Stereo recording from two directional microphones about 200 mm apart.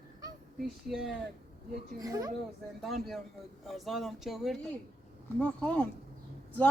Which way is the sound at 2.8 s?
Centre (ahead or behind).